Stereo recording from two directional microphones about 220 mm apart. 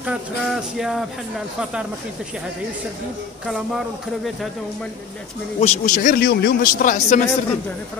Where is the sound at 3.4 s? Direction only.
Centre (ahead or behind).